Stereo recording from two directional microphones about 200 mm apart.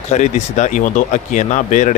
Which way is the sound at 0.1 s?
35° left (ahead or behind).